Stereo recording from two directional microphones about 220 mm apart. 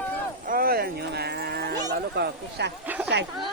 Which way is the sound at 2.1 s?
50° right (ahead or behind).